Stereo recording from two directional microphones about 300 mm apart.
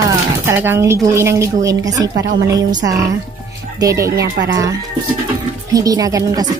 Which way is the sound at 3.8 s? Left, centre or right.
Centre.